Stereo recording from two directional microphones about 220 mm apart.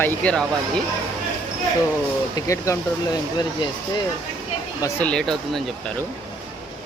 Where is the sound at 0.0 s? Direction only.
5° left (ahead or behind).